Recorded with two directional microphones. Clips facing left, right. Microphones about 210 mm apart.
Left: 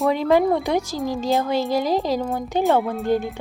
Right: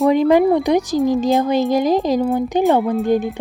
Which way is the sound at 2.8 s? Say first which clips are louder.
Right 6 dB; centre (ahead or behind).